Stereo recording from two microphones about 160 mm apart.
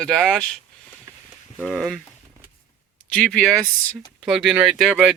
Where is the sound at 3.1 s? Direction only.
5° left (ahead or behind).